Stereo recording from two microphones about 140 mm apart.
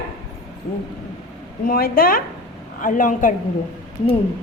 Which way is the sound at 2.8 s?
70° left (ahead or behind).